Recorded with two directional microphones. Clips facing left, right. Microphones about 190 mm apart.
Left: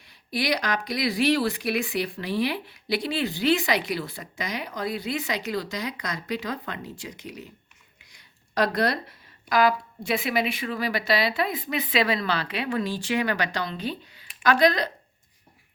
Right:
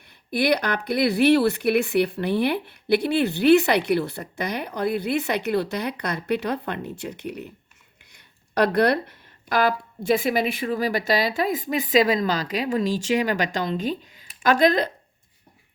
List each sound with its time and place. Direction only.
0.3 s speech: 55° right (ahead or behind)
8.1 s a sound: 60° right (ahead or behind)
9.5 s speech: 50° right (ahead or behind)